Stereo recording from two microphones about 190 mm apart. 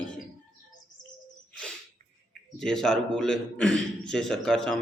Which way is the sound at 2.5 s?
5° left (ahead or behind).